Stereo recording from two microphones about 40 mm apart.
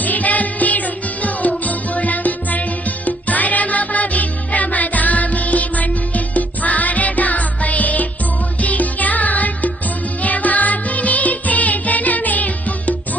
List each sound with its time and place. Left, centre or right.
0.0 s music: left